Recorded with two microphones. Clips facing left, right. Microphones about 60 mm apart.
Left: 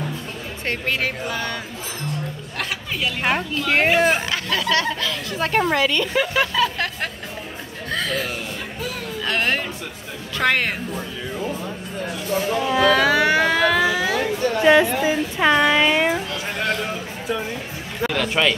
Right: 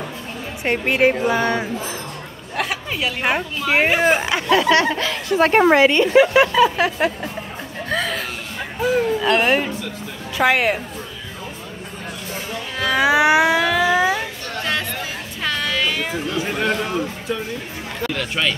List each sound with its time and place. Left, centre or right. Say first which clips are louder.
0.7 s speech: right 7 dB; right
2.5 s speech: right 5 dB; centre
4.5 s a woman's voice: right 7 dB; right
6.1 s speech: right 7 dB; centre
7.9 s chuckle: right 1 dB; centre
9.2 s a woman's voice: right 5 dB; centre
12.6 s music: left 6 dB; centre
12.9 s a sound: right 2 dB; centre
14.6 s a sound: left 9 dB; centre
16.4 s a sound: right 2 dB; centre
18.1 s speech: left 3 dB; centre